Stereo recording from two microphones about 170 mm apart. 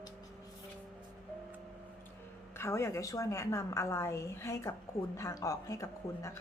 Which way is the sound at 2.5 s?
15° left (ahead or behind).